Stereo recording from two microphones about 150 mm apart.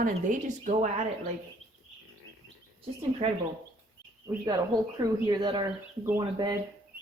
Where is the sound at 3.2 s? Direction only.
40° right (ahead or behind).